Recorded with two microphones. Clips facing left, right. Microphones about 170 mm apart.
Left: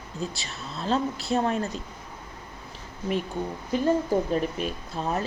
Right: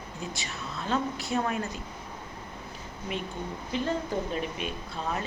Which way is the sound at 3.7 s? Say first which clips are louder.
Left 7 dB; 45° left (ahead or behind).